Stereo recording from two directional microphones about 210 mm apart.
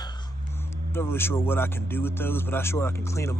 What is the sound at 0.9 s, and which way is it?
Speech, 10° left (ahead or behind).